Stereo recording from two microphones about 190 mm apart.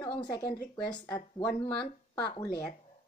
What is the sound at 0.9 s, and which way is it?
Speech, 25° left (ahead or behind).